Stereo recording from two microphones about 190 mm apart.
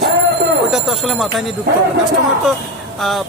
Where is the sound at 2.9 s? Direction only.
Centre (ahead or behind).